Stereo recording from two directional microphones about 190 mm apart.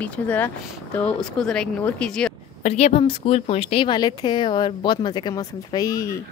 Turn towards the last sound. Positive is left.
turn(degrees=20)  # may be behind; listen again after turning